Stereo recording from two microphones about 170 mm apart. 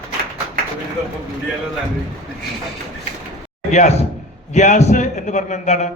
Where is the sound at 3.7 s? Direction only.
45° left (ahead or behind).